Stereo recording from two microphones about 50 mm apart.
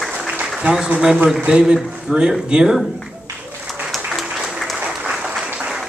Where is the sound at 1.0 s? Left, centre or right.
Centre.